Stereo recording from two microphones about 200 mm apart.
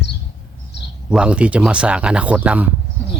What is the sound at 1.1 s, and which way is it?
Speech, 5° right (ahead or behind).